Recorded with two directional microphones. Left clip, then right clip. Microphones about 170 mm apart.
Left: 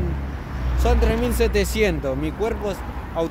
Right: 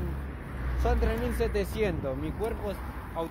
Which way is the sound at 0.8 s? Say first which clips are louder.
Left 8 dB; 20° left (ahead or behind).